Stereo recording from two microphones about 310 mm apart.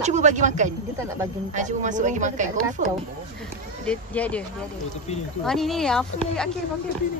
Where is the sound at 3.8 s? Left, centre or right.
Centre.